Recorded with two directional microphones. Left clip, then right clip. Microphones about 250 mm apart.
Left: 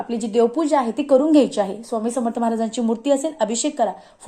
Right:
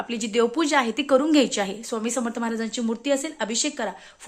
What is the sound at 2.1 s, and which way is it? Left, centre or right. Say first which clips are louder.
Speech: left 5 dB; right.